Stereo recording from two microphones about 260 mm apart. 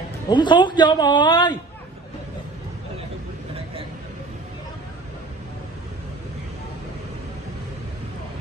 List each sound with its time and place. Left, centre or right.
0.3 s a woman's voice: centre